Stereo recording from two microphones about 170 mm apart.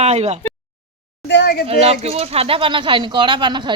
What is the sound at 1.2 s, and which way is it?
Speech, 80° left.